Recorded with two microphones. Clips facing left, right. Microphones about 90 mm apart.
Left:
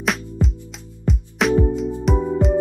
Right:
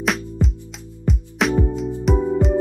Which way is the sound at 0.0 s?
Centre (ahead or behind).